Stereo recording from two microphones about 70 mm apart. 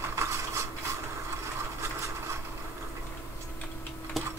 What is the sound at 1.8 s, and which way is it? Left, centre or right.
Wood, right.